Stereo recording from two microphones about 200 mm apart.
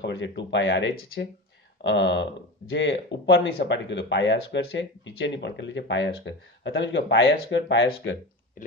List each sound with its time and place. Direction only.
0.0 s speech: 60° left (ahead or behind)
1.8 s speech: 60° left (ahead or behind)